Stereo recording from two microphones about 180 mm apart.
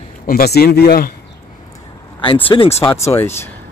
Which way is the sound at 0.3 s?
60° left (ahead or behind).